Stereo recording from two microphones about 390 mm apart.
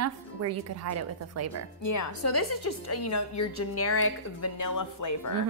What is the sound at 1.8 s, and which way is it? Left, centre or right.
A woman's voice, left.